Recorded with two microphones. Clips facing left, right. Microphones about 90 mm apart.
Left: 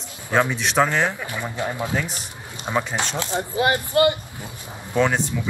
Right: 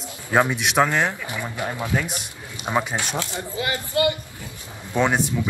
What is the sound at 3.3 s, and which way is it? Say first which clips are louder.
Speech: left 6 dB; 45° left (ahead or behind).